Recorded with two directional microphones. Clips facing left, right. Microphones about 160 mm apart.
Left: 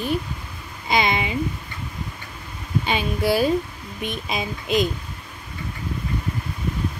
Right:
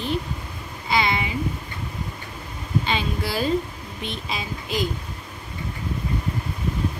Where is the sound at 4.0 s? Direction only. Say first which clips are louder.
Left 4 dB; 15° left (ahead or behind).